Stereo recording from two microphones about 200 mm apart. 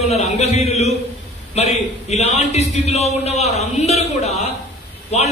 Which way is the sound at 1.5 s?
35° left (ahead or behind).